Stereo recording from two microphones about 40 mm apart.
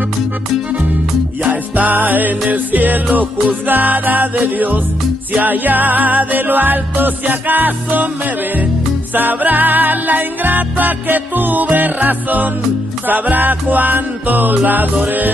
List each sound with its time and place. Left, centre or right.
1.4 s music: right
9.1 s music: right